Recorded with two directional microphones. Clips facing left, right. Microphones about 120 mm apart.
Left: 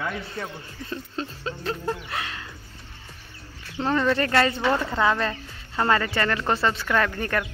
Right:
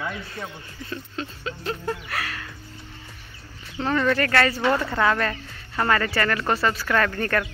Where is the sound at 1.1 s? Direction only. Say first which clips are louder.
Left 1 dB; 35° left (ahead or behind).